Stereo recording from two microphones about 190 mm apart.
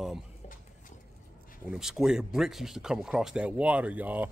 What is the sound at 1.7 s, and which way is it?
A man's voice, 5° right (ahead or behind).